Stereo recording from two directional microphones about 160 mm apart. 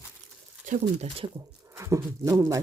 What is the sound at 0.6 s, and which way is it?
Speech, 45° right (ahead or behind).